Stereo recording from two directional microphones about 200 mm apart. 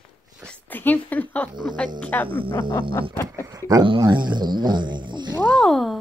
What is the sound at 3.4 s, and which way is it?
Speech, 15° right (ahead or behind).